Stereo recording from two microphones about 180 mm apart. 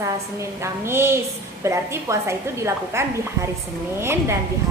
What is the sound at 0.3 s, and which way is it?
A woman's voice, 15° right (ahead or behind).